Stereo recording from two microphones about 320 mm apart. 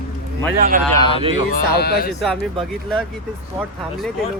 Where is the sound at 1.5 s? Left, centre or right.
Left.